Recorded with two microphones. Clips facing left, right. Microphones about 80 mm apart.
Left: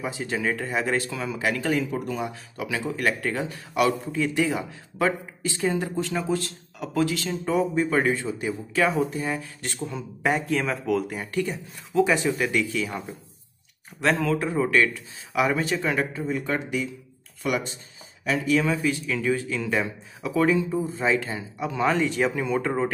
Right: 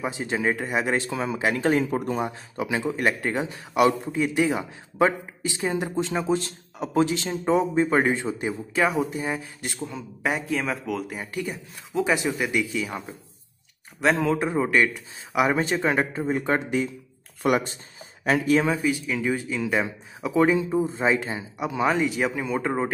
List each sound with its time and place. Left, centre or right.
0.0 s speech: right
9.8 s speech: centre
11.9 s speech: centre
14.1 s speech: right
17.4 s speech: right
18.7 s speech: centre